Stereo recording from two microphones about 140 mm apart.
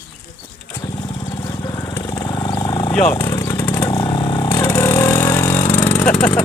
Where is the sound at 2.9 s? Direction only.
5° left (ahead or behind).